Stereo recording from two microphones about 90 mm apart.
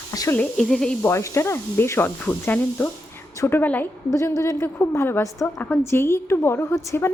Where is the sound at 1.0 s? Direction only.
30° left (ahead or behind).